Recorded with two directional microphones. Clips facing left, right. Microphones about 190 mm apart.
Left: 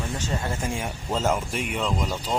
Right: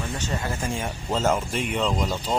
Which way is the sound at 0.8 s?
5° left (ahead or behind).